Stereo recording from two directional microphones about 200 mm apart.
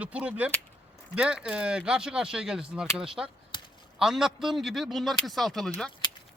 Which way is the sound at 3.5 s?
25° left (ahead or behind).